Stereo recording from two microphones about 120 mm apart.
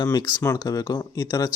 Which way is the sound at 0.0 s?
30° left (ahead or behind).